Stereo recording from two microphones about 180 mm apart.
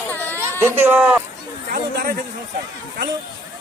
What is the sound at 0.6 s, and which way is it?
Speech, 10° right (ahead or behind).